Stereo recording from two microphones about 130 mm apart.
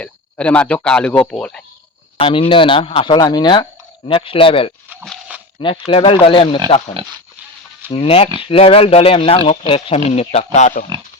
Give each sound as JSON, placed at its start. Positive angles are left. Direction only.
{"t": 0.0, "sound": "speech", "side_deg": 10}
{"t": 2.1, "sound": "speech", "side_deg": 45}
{"t": 6.7, "sound": "speech", "side_deg": 55}
{"t": 7.9, "sound": "speech", "side_deg": 45}